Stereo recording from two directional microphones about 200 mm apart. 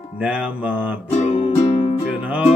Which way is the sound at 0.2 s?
5° right (ahead or behind).